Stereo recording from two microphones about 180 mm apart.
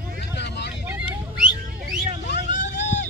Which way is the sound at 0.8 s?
5° right (ahead or behind).